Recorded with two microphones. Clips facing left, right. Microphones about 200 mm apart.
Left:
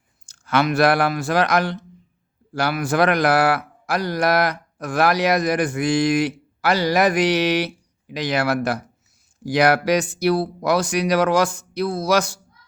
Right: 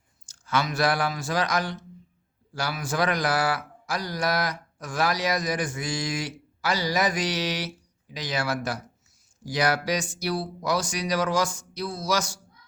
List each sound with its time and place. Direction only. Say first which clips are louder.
0.3 s a man's voice: left 7 dB; 65° left (ahead or behind)